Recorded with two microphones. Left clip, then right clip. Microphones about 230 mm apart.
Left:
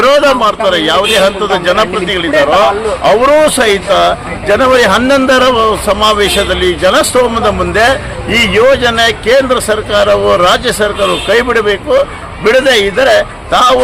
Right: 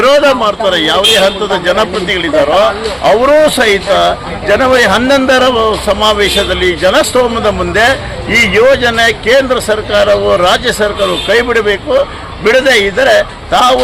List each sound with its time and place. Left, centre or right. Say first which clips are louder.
0.0 s a man's voice: even; centre